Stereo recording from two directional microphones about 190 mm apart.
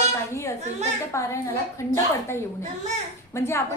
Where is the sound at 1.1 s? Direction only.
15° left (ahead or behind).